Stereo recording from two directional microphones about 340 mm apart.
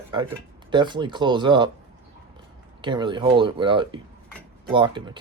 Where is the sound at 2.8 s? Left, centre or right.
Centre.